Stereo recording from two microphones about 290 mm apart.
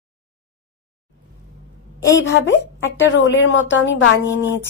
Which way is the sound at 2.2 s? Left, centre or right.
Left.